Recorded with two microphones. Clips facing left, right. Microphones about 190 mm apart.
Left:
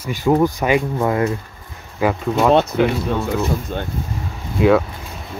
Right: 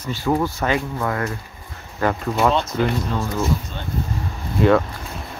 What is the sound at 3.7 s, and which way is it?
Speech, 50° left (ahead or behind).